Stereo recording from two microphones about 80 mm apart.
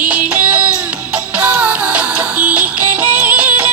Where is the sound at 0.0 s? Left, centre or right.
Centre.